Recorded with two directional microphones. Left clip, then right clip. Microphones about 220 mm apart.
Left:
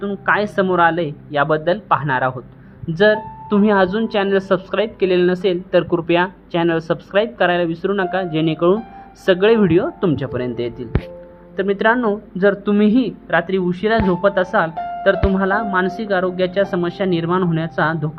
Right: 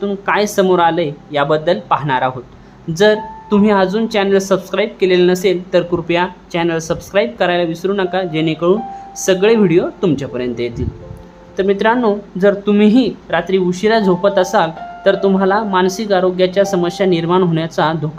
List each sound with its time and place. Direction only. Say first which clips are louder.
0.0 s a woman's voice: right 2 dB; 10° left (ahead or behind)